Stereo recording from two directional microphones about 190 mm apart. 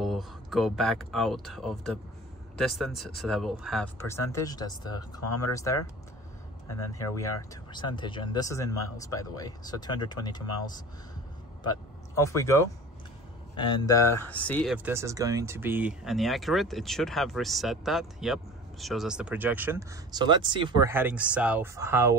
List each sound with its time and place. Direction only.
0.0 s speech: centre (ahead or behind)
4.0 s speech: 15° left (ahead or behind)
6.9 s speech: 15° left (ahead or behind)
12.3 s speech: 15° left (ahead or behind)
14.7 s speech: 15° right (ahead or behind)
20.9 s speech: 10° right (ahead or behind)